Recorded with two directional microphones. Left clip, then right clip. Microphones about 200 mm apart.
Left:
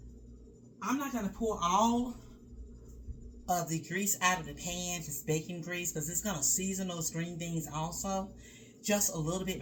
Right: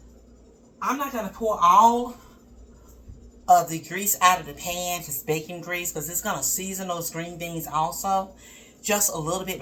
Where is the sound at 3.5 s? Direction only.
10° left (ahead or behind).